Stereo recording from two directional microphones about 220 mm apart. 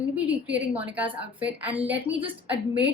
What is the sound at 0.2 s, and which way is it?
Speech, 5° right (ahead or behind).